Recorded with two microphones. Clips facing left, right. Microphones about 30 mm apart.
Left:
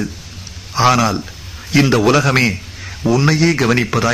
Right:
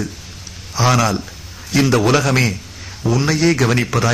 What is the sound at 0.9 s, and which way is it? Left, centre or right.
A man's voice, centre.